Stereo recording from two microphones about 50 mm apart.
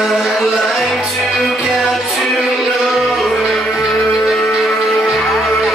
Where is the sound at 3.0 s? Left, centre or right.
Centre.